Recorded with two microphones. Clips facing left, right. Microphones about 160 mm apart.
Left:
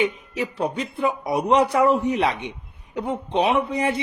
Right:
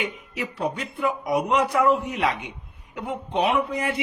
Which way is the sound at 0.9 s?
30° left (ahead or behind).